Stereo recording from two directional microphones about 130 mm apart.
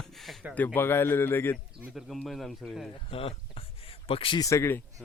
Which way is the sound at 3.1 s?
45° left (ahead or behind).